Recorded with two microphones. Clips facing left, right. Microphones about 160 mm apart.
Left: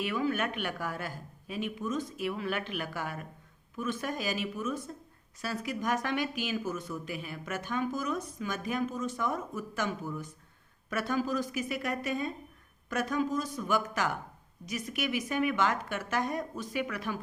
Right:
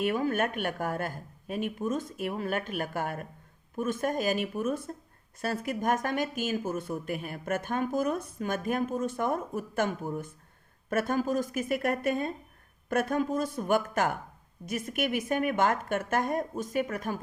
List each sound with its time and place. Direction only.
0.0 s speech: 50° right (ahead or behind)